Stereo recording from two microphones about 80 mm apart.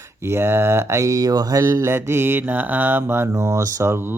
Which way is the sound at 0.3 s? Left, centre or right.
Right.